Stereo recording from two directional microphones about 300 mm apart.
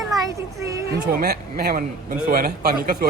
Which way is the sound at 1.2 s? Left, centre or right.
Right.